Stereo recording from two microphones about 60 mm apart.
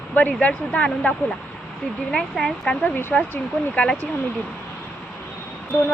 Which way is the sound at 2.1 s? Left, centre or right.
Centre.